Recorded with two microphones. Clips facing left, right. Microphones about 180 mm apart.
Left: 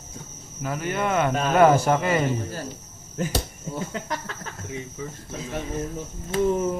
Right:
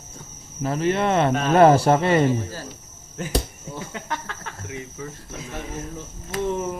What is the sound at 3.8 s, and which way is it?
Speech, 35° left (ahead or behind).